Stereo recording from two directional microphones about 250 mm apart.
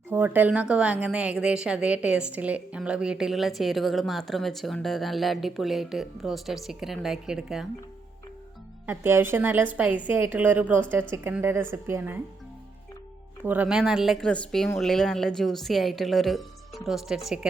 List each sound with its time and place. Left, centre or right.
0.1 s a woman's voice: centre
8.9 s a woman's voice: centre
13.4 s a woman's voice: centre